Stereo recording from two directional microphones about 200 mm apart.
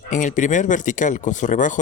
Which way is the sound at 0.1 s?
40° left (ahead or behind).